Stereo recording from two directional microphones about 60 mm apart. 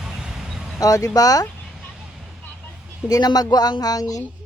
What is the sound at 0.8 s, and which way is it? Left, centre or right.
Speech, left.